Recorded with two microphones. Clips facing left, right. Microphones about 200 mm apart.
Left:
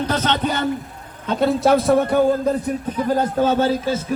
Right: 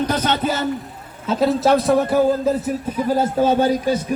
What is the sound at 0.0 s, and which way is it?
A man's voice, 10° right (ahead or behind).